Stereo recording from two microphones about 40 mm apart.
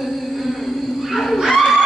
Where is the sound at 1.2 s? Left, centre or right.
Centre.